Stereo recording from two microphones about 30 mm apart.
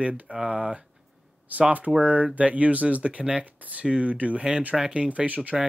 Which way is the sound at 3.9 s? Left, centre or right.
Right.